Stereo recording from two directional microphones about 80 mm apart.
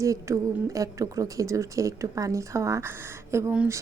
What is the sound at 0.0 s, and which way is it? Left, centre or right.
Speech, right.